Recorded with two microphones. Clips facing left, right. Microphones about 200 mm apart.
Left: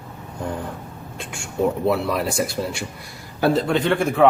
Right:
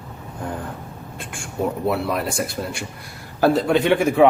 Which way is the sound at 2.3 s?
55° right (ahead or behind).